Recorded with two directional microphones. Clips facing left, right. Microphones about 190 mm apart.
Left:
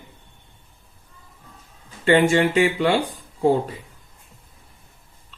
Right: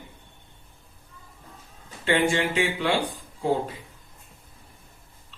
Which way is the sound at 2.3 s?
50° left (ahead or behind).